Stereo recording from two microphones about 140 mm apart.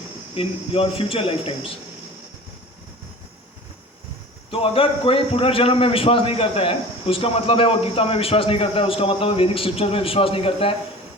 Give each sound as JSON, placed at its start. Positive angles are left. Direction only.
{"t": 0.3, "sound": "a man's voice", "side_deg": 40}
{"t": 4.5, "sound": "a man's voice", "side_deg": 40}